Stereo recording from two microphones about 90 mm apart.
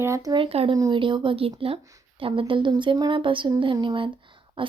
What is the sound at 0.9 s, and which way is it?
A woman's voice, 65° right (ahead or behind).